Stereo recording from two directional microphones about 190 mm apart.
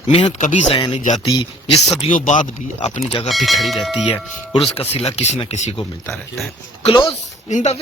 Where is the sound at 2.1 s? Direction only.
40° left (ahead or behind).